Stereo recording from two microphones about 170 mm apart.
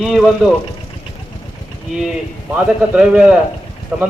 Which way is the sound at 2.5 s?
5° right (ahead or behind).